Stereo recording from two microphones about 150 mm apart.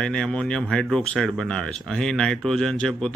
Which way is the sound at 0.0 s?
5° left (ahead or behind).